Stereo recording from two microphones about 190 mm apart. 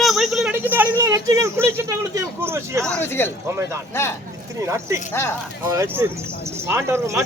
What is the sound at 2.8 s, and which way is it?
Speech, 10° left (ahead or behind).